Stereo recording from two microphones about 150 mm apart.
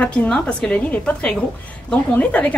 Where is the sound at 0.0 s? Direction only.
10° left (ahead or behind).